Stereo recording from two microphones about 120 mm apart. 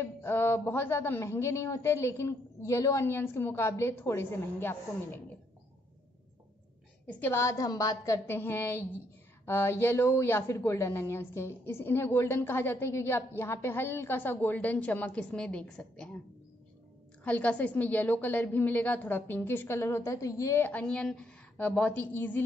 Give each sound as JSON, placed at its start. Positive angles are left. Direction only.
{"t": 0.0, "sound": "a woman's voice", "side_deg": 20}
{"t": 7.1, "sound": "a woman's voice", "side_deg": 15}
{"t": 17.2, "sound": "a woman's voice", "side_deg": 10}
{"t": 20.9, "sound": "a woman's voice", "side_deg": 5}